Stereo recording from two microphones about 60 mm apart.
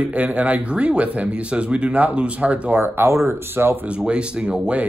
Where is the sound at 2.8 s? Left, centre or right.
Right.